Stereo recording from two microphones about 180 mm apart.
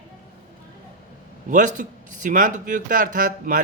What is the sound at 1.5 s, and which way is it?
Speech, 45° right (ahead or behind).